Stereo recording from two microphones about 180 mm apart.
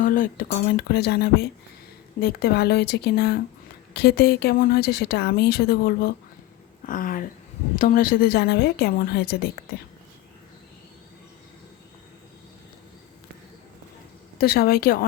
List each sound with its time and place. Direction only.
0.0 s speech: 50° left (ahead or behind)
14.3 s speech: 55° left (ahead or behind)